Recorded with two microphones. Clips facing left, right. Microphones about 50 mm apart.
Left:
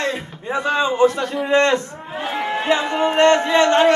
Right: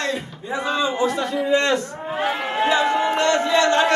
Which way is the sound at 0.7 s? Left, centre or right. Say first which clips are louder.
Left 5 dB; left.